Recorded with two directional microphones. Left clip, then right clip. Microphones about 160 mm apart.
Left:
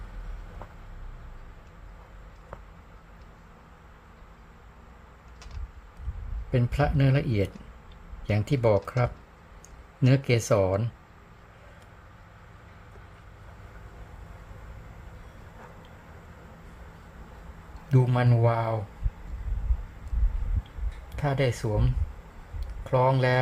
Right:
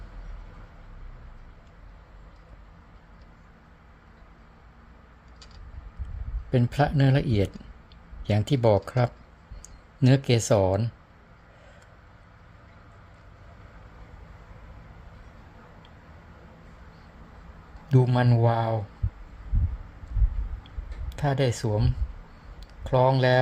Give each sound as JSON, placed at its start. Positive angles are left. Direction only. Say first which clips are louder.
{"t": 6.5, "sound": "speech", "louder": "right 2 dB", "side_deg": -25}
{"t": 17.8, "sound": "speech", "louder": "right 2 dB", "side_deg": -20}
{"t": 21.2, "sound": "speech", "louder": "right 1 dB", "side_deg": -25}